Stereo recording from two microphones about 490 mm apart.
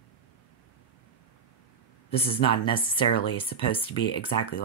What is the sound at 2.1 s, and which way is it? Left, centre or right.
Speech, centre.